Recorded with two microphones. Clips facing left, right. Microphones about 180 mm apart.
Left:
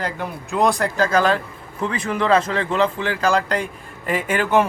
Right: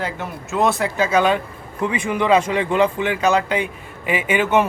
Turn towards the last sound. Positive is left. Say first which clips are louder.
# right 1 dB
turn(degrees=-5)  # may be behind; listen again after turning